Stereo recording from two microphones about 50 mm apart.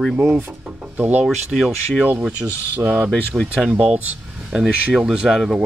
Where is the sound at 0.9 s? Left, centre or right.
Right.